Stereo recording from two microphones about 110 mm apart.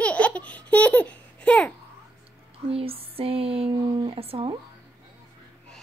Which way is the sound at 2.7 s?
60° right (ahead or behind).